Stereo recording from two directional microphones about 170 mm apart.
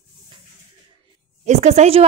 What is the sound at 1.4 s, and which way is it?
Speech, 40° right (ahead or behind).